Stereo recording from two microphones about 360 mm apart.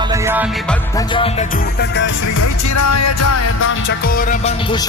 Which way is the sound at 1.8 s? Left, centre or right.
Left.